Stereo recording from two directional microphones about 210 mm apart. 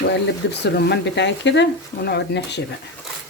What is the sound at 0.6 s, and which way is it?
Speech, 55° left (ahead or behind).